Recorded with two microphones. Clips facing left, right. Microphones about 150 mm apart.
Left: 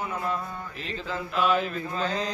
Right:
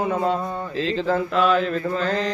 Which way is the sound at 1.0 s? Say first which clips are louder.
Right 7 dB; 55° right (ahead or behind).